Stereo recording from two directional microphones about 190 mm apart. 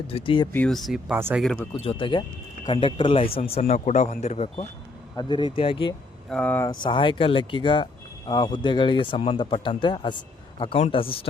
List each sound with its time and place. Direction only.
0.1 s speech: 30° left (ahead or behind)
0.5 s speech: 5° left (ahead or behind)
1.8 s speech: 30° left (ahead or behind)
5.1 s speech: 25° left (ahead or behind)
6.3 s speech: 10° left (ahead or behind)
6.8 s speech: 25° left (ahead or behind)